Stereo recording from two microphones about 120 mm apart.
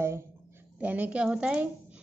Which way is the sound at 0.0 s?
20° right (ahead or behind).